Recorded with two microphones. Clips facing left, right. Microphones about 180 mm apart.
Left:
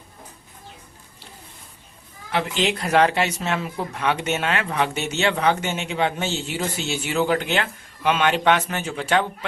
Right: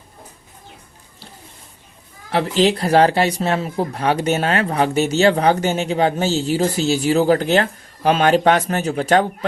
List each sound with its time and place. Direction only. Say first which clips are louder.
2.3 s speech: right 6 dB; 35° right (ahead or behind)